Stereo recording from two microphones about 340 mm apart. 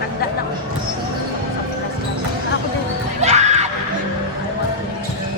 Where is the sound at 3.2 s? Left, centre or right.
Centre.